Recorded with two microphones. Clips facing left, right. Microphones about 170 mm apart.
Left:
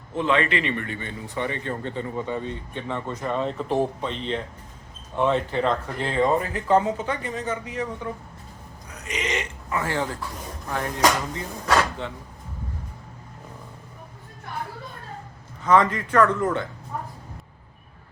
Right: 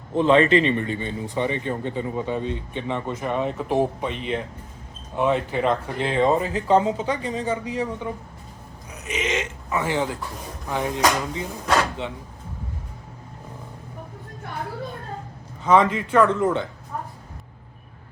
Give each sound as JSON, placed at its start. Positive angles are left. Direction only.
{"t": 0.1, "sound": "speech", "side_deg": -35}
{"t": 8.9, "sound": "a sound", "side_deg": -20}
{"t": 9.6, "sound": "speech", "side_deg": -10}
{"t": 15.6, "sound": "speech", "side_deg": -20}